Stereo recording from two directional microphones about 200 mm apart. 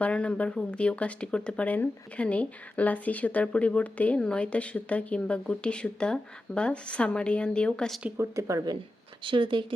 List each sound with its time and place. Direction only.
0.0 s speech: 5° left (ahead or behind)
8.2 s speech: 15° right (ahead or behind)